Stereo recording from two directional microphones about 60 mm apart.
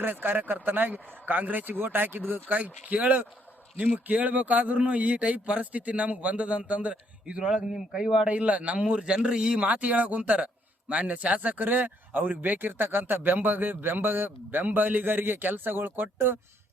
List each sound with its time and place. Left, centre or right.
0.0 s a man's voice: right